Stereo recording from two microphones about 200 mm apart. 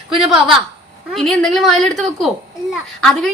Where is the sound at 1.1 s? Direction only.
Centre (ahead or behind).